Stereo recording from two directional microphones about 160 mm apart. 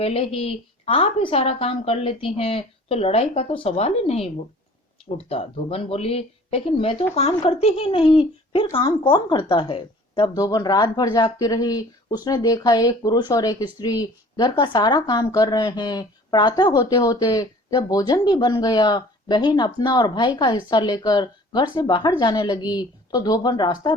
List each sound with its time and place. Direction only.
0.0 s speech: 40° left (ahead or behind)